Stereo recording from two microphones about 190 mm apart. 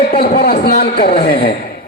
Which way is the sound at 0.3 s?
50° left (ahead or behind).